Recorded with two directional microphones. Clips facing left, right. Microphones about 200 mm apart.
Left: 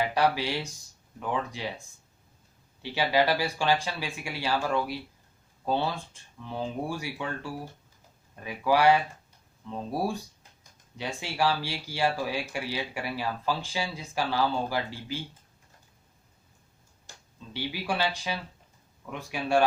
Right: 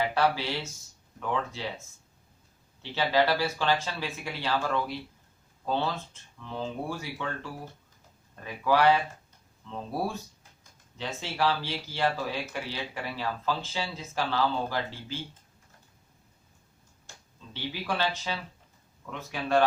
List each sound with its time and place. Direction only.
0.0 s speech: 15° left (ahead or behind)
2.8 s speech: 15° left (ahead or behind)
17.5 s speech: 10° left (ahead or behind)